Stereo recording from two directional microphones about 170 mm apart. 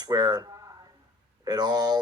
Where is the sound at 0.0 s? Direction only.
25° right (ahead or behind).